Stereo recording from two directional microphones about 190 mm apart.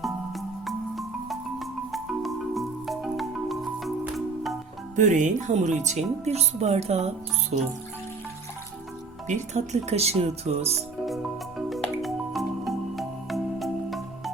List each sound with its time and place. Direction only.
0.0 s marimba: centre (ahead or behind)
4.9 s speech: 40° right (ahead or behind)
9.2 s speech: 40° right (ahead or behind)
11.0 s music: centre (ahead or behind)